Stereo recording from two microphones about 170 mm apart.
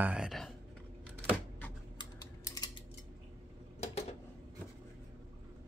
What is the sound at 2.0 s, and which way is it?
Typing, 20° left (ahead or behind).